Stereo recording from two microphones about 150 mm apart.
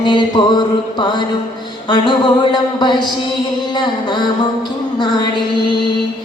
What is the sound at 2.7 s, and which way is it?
Music, 30° left (ahead or behind).